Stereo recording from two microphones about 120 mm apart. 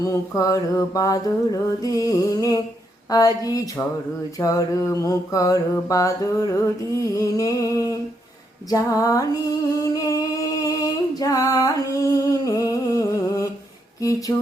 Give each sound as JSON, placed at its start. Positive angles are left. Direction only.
{"t": 0.0, "sound": "music", "side_deg": 30}
{"t": 9.8, "sound": "singing", "side_deg": 30}
{"t": 14.0, "sound": "music", "side_deg": 30}